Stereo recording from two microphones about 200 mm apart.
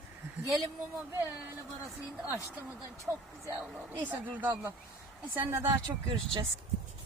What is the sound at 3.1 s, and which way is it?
Speech, 5° right (ahead or behind).